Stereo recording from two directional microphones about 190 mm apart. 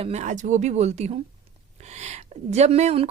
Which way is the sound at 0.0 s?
35° right (ahead or behind).